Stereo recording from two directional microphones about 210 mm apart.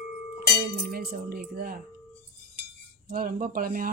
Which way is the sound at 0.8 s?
45° right (ahead or behind).